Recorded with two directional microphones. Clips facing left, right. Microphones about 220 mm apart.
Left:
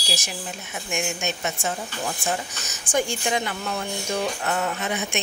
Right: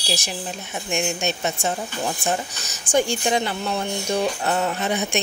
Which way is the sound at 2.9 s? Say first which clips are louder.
Right 4 dB; 30° right (ahead or behind).